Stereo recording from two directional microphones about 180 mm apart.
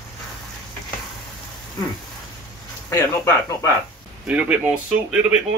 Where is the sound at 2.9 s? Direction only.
15° left (ahead or behind).